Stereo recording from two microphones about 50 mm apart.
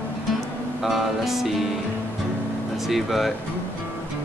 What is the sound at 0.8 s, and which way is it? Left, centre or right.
Speech, centre.